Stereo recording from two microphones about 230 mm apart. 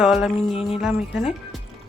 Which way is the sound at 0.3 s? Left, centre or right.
Left.